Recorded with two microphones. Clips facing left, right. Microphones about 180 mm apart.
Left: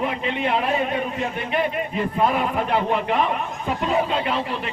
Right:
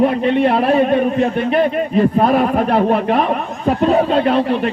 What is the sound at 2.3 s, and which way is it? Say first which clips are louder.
Speech: right 8 dB; 45° right (ahead or behind).